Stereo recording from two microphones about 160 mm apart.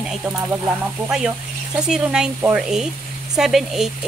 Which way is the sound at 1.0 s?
5° right (ahead or behind).